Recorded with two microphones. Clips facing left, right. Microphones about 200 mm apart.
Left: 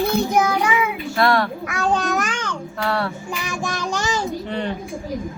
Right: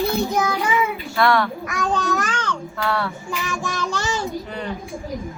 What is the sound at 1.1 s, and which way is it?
Speech, 30° left (ahead or behind).